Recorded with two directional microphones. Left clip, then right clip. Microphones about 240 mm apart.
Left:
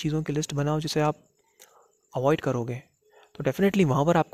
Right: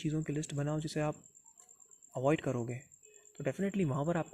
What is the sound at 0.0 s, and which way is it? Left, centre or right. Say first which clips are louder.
Speech: left 9 dB; left.